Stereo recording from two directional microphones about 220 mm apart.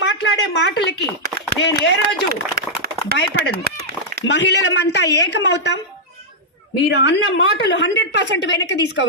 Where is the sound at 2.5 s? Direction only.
45° right (ahead or behind).